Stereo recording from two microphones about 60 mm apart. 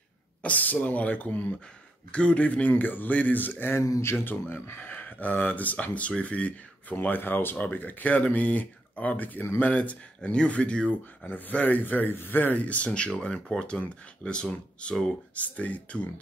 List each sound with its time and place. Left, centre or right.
0.4 s speech: left
11.2 s speech: left